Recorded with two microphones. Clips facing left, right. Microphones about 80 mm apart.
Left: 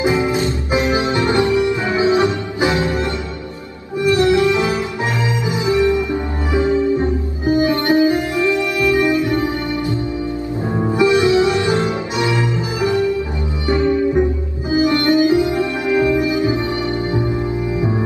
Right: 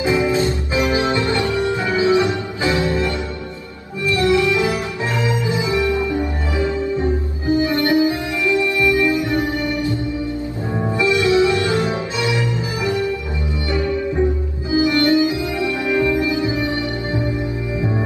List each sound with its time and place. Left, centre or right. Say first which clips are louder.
0.0 s music: even; left
4.1 s music: left 2 dB; left